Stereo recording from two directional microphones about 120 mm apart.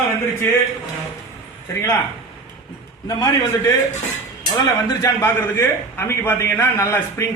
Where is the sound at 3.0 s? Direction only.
35° left (ahead or behind).